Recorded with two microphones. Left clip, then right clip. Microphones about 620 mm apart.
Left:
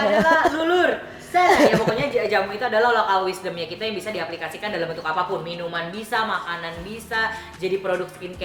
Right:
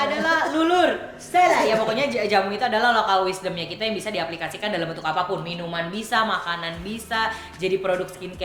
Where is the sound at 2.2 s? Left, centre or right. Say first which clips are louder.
Right 1 dB; right.